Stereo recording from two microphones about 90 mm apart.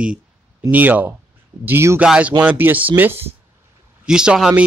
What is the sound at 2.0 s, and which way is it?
Speech, 15° right (ahead or behind).